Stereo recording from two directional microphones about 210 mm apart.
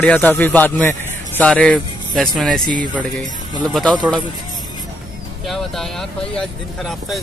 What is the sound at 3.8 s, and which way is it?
Speech, 20° right (ahead or behind).